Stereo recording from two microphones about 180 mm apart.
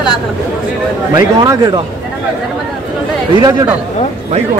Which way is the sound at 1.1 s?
20° right (ahead or behind).